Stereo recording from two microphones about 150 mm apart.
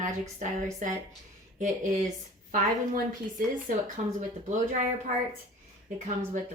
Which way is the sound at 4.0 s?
50° right (ahead or behind).